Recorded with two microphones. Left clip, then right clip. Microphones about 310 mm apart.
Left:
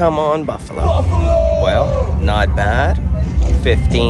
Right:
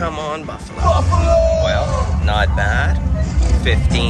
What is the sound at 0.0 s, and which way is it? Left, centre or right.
Speech, centre.